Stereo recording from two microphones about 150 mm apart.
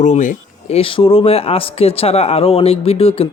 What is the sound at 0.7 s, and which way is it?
Speech, 35° left (ahead or behind).